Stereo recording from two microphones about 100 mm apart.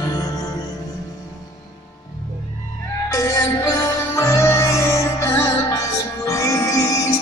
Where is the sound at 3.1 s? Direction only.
35° left (ahead or behind).